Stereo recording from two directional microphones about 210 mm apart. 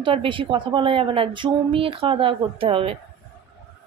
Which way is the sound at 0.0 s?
25° right (ahead or behind).